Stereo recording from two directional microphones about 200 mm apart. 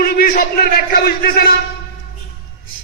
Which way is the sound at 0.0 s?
45° left (ahead or behind).